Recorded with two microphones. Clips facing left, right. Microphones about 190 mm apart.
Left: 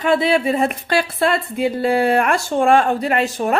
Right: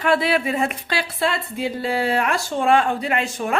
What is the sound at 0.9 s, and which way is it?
Speech, 50° left (ahead or behind).